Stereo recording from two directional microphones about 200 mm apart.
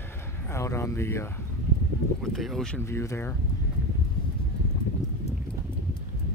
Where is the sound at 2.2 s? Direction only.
Centre (ahead or behind).